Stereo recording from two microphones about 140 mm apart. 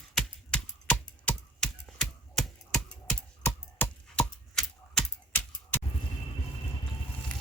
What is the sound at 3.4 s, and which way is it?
Typing, 10° left (ahead or behind).